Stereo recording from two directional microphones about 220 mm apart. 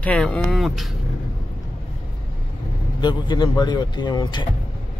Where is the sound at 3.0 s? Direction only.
20° left (ahead or behind).